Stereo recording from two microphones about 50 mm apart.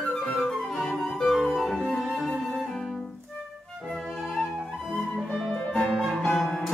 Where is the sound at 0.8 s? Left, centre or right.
Centre.